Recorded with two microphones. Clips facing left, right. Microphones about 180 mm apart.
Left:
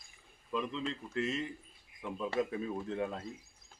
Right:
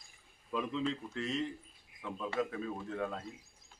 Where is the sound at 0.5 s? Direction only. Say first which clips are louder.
Right 1 dB; centre (ahead or behind).